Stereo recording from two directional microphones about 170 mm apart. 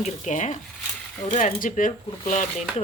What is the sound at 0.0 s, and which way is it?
Speech, 45° left (ahead or behind).